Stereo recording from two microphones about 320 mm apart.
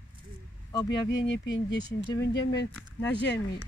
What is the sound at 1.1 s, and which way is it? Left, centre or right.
Speech, left.